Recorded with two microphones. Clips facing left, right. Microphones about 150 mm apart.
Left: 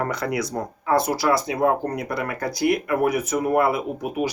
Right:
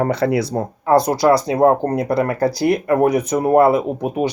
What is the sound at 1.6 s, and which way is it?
Speech, 30° right (ahead or behind).